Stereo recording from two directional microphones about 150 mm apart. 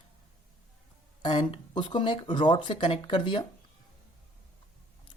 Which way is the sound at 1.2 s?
30° left (ahead or behind).